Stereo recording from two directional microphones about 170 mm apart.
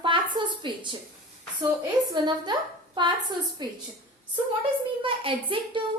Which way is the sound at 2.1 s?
25° right (ahead or behind).